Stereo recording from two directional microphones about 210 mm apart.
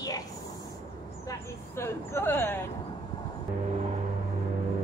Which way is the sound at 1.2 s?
10° left (ahead or behind).